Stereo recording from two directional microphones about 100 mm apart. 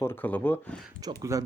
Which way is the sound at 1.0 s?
35° right (ahead or behind).